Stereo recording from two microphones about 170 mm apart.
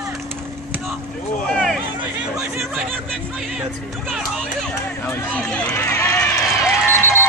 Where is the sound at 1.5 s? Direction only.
Centre (ahead or behind).